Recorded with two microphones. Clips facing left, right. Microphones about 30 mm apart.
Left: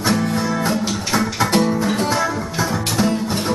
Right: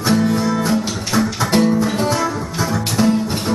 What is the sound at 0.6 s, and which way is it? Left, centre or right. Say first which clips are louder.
Music: right 1 dB; left.